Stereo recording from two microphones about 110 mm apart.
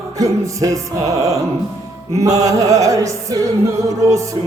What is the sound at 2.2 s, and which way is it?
Mantra, 30° right (ahead or behind).